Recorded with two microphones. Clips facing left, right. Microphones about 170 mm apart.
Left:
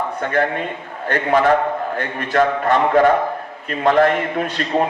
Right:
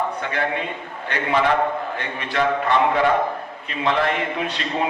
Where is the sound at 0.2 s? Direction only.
45° left (ahead or behind).